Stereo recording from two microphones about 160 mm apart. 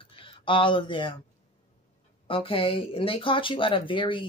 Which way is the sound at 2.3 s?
35° left (ahead or behind).